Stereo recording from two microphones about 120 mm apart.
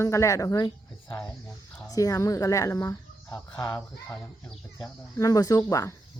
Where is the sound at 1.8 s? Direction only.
30° left (ahead or behind).